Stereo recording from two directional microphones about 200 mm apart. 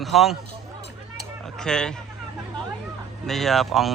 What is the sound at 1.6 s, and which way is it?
Speech, 5° left (ahead or behind).